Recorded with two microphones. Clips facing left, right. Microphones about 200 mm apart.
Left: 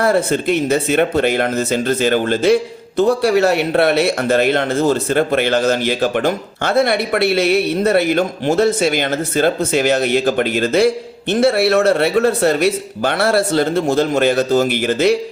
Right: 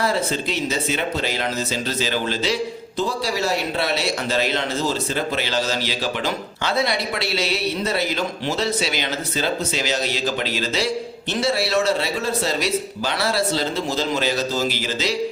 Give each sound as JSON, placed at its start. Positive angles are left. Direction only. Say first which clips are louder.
{"t": 0.0, "sound": "speech", "louder": "left 7 dB", "side_deg": 55}